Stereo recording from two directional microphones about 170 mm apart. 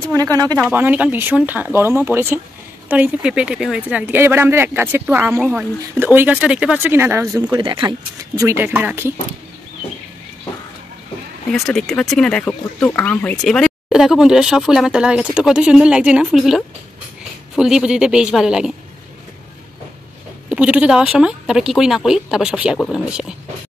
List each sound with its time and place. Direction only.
0.1 s speech: 20° right (ahead or behind)
0.6 s speech: 10° right (ahead or behind); by 7.9 s 30° right (ahead or behind)
8.4 s speech: 15° right (ahead or behind)
11.5 s speech: centre (ahead or behind)
20.4 s speech: 5° right (ahead or behind)